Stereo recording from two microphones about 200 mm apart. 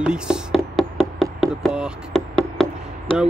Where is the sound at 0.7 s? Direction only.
Centre (ahead or behind).